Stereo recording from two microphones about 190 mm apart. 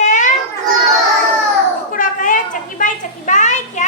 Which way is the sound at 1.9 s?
45° left (ahead or behind).